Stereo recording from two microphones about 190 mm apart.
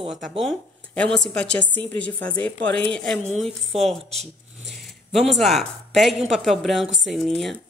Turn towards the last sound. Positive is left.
turn(degrees=0)  # may be behind; listen again after turning